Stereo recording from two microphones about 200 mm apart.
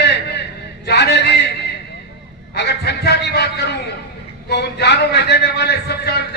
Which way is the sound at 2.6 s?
55° left (ahead or behind).